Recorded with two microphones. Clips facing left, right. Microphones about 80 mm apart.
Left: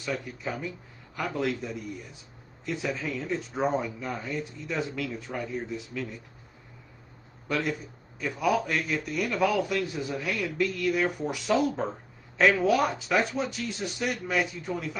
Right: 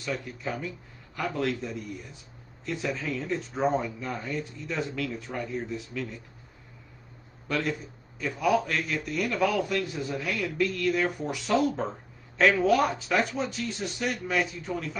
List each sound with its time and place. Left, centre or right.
0.0 s speech: centre
0.4 s a man's voice: centre
7.4 s a man's voice: centre
7.7 s a man's voice: centre